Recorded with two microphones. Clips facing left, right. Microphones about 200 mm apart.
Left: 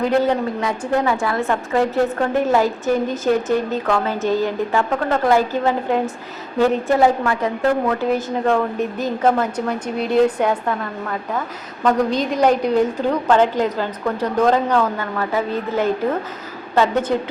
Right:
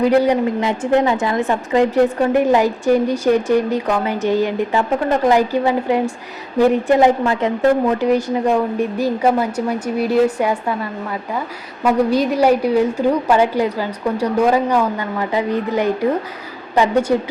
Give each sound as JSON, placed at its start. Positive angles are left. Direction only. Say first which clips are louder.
{"t": 0.2, "sound": "a woman's voice", "louder": "right 3 dB", "side_deg": -15}
{"t": 11.8, "sound": "a woman's voice", "louder": "right 3 dB", "side_deg": -10}